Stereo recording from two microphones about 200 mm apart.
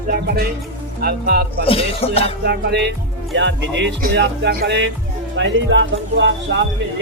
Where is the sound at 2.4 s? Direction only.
55° right (ahead or behind).